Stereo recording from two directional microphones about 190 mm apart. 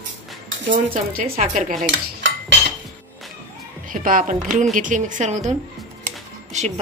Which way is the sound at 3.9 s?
45° right (ahead or behind).